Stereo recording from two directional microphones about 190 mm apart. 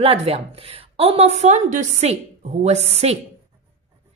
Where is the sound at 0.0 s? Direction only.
30° right (ahead or behind).